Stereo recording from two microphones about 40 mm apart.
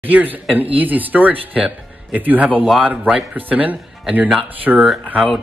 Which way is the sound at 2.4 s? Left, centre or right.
Right.